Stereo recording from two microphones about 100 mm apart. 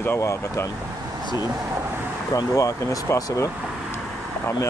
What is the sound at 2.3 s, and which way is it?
Speech, 35° left (ahead or behind).